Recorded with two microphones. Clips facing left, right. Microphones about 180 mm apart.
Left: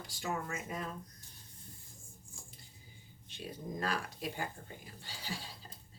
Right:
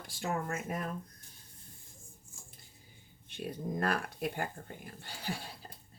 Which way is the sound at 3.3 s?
55° right (ahead or behind).